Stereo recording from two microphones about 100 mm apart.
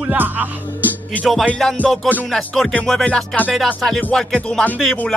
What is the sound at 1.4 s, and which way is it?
Music, 15° left (ahead or behind).